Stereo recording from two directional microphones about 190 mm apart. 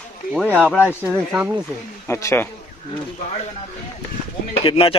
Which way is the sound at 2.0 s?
15° left (ahead or behind).